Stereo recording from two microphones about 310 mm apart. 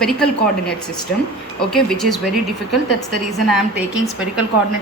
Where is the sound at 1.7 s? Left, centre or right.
Centre.